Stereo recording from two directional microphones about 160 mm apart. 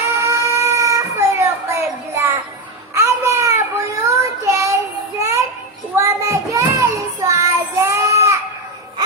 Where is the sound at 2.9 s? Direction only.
15° right (ahead or behind).